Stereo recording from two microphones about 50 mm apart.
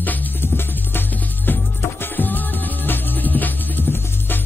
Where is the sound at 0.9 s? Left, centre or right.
Left.